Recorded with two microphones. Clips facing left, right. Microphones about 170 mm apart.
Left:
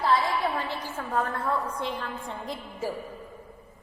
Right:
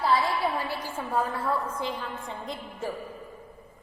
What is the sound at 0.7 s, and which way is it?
A woman's voice, 10° right (ahead or behind).